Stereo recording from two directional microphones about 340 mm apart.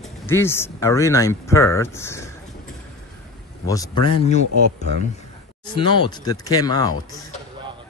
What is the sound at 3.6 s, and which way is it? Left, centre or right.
Speech, centre.